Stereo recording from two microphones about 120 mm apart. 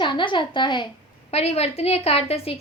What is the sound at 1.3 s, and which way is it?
A woman's voice, 60° left (ahead or behind).